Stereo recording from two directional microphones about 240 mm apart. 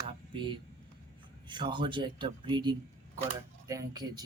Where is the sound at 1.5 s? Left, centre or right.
Centre.